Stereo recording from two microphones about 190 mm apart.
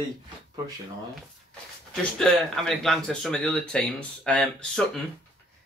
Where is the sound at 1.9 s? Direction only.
Centre (ahead or behind).